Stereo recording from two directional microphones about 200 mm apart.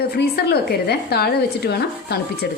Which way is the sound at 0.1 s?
55° left (ahead or behind).